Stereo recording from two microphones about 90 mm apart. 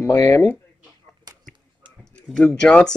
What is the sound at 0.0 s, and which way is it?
Speech, 35° left (ahead or behind).